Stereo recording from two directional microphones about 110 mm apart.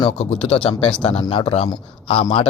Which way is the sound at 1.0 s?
65° left (ahead or behind).